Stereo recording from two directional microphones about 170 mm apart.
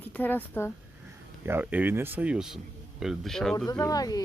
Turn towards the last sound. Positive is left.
turn(degrees=20)  # may be behind; listen again after turning